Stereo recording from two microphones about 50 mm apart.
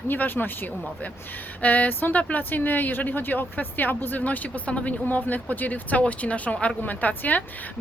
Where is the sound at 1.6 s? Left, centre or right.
Left.